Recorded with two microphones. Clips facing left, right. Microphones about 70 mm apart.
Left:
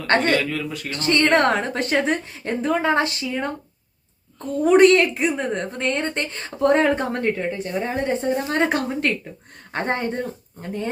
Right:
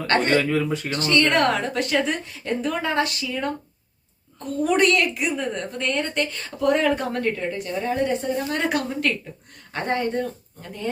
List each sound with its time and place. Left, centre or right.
0.3 s speech: right
1.0 s a woman's voice: left
4.6 s a woman's voice: left